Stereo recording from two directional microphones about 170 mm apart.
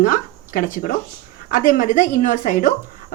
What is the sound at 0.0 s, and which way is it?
A woman's voice, 55° left (ahead or behind).